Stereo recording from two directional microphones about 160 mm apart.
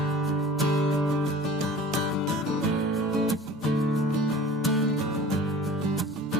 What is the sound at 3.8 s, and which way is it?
Music, centre (ahead or behind).